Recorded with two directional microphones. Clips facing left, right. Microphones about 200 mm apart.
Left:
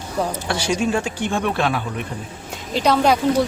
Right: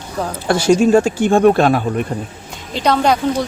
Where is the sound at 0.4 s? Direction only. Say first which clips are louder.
Right 13 dB; 45° right (ahead or behind).